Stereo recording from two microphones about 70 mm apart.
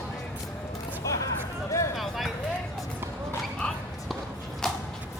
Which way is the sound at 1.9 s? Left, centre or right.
Centre.